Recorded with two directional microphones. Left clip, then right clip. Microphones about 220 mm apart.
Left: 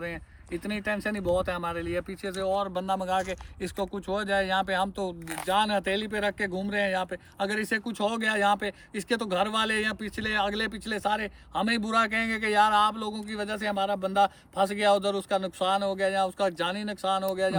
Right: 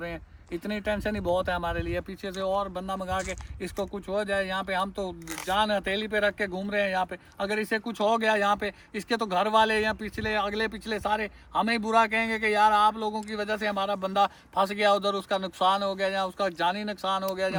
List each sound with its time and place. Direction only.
1.0 s speech: 30° right (ahead or behind)
1.8 s speech: centre (ahead or behind)